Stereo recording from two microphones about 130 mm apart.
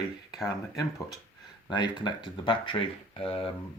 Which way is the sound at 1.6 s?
35° left (ahead or behind).